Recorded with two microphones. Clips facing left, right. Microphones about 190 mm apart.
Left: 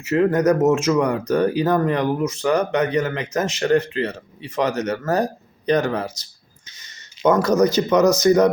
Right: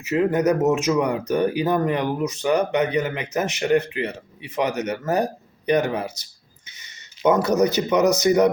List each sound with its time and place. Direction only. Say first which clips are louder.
0.0 s speech: left 2 dB; 15° right (ahead or behind)
6.8 s a sound: left 1 dB; 15° right (ahead or behind)
7.8 s speech: left 3 dB; 15° right (ahead or behind)